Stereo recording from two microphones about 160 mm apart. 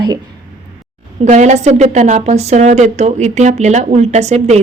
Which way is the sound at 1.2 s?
45° right (ahead or behind).